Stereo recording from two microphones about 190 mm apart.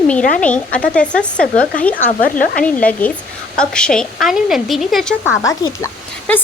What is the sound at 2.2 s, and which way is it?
Speech, 45° left (ahead or behind).